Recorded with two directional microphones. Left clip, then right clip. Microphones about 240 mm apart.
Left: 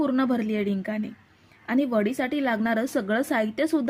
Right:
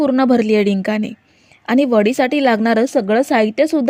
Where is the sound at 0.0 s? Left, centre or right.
Right.